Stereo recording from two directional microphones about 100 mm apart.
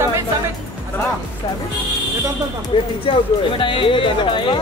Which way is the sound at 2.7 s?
60° left (ahead or behind).